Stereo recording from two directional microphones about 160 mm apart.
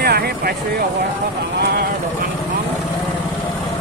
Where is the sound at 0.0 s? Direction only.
80° right.